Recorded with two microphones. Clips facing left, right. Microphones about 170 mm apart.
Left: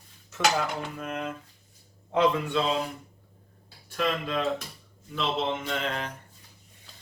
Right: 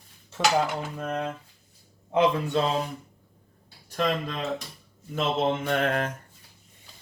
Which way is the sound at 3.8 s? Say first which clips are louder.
Right 1 dB; 40° right (ahead or behind).